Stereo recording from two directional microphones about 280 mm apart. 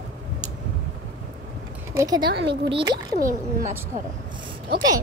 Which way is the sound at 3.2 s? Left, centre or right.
Right.